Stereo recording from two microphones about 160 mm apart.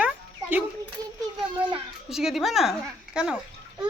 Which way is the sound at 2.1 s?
Centre (ahead or behind).